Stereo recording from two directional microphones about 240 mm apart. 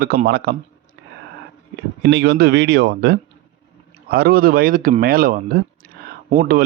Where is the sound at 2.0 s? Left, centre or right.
Right.